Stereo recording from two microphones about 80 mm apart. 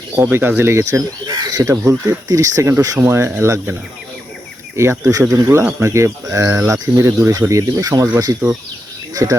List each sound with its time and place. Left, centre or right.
0.2 s speech: right
1.7 s speech: right
2.2 s speech: right
4.8 s speech: right